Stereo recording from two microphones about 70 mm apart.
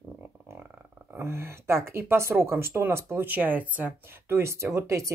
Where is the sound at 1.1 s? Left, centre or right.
Right.